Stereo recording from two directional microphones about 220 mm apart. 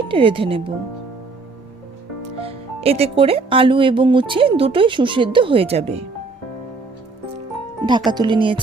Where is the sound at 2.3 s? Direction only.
25° right (ahead or behind).